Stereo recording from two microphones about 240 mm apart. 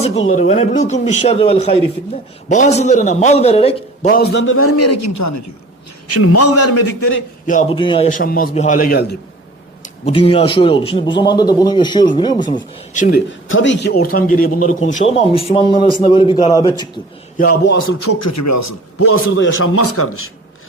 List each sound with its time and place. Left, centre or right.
0.0 s a man's voice: left
4.1 s a man's voice: left
6.1 s a man's voice: left
7.4 s a man's voice: left
7.8 s a man's voice: left
8.2 s a man's voice: left
10.1 s a man's voice: left
12.9 s a man's voice: left
13.5 s a man's voice: left; by 16.9 s centre
17.3 s a man's voice: left